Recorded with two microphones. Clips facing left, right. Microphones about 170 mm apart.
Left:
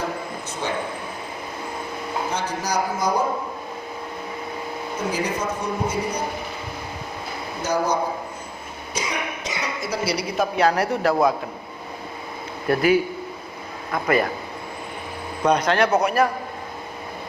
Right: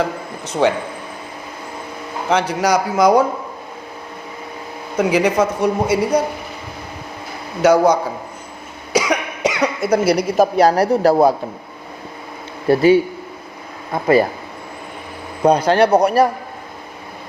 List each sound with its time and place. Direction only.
0.6 s speech: 75° right (ahead or behind)
2.3 s speech: 85° right
4.9 s speech: 85° right
7.6 s a man's voice: 90° right; by 11.3 s 35° right (ahead or behind)
12.6 s a man's voice: 30° right (ahead or behind)
15.4 s a man's voice: 30° right (ahead or behind)